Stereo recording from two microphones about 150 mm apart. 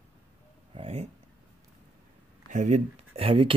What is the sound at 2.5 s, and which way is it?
Speech, 50° right (ahead or behind).